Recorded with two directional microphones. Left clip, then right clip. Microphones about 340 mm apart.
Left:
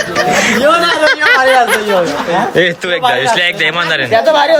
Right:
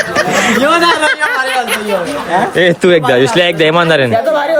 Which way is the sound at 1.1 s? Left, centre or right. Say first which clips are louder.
Left 5 dB; left.